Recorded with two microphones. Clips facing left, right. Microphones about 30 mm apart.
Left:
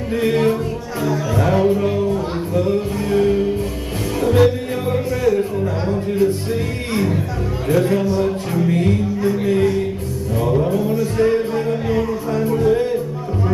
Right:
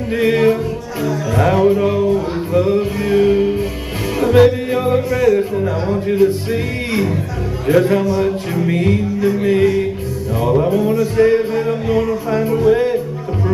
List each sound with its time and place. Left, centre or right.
0.1 s music: centre
4.2 s speech: centre
7.6 s music: centre